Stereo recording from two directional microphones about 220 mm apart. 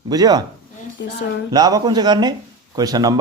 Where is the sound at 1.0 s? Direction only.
50° left (ahead or behind).